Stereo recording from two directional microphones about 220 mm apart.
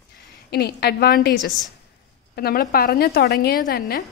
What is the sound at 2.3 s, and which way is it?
A woman's voice, 45° left (ahead or behind).